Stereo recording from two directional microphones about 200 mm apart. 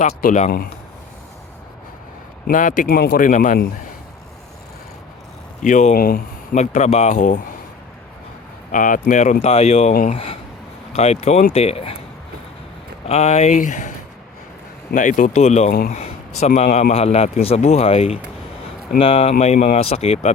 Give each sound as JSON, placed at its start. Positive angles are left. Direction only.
{"t": 0.2, "sound": "speech", "side_deg": 40}
{"t": 2.5, "sound": "speech", "side_deg": 40}
{"t": 5.6, "sound": "speech", "side_deg": 40}
{"t": 8.7, "sound": "speech", "side_deg": 40}
{"t": 9.9, "sound": "speech", "side_deg": 45}
{"t": 10.9, "sound": "speech", "side_deg": 30}
{"t": 13.1, "sound": "speech", "side_deg": 35}
{"t": 14.9, "sound": "speech", "side_deg": 40}